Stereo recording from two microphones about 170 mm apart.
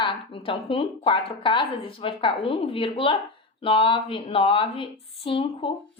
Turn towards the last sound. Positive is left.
turn(degrees=30)  # may be behind; listen again after turning